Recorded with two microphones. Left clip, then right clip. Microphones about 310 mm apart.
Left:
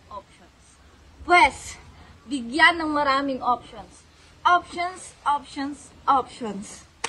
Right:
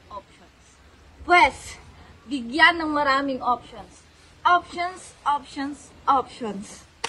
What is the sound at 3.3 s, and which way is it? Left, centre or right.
A woman's voice, right.